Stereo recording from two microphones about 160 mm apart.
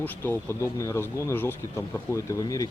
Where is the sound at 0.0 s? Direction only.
15° left (ahead or behind).